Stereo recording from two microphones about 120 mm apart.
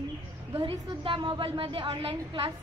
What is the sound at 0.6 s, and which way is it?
A woman's voice, 45° right (ahead or behind).